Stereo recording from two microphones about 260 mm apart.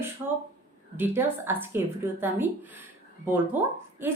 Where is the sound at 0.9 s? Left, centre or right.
Centre.